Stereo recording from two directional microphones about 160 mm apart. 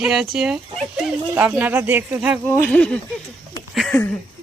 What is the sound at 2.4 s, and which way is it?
Speech, 10° left (ahead or behind).